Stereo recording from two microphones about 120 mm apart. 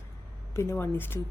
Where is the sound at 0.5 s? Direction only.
20° left (ahead or behind).